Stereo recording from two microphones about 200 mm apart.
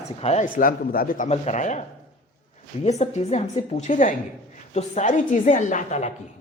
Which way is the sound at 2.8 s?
35° left (ahead or behind).